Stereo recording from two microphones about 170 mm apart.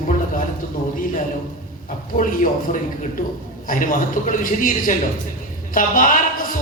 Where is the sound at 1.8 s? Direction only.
50° left (ahead or behind).